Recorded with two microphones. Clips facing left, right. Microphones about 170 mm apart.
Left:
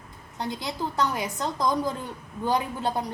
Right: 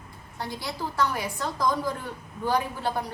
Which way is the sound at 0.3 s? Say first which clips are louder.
Left 3 dB; 20° left (ahead or behind).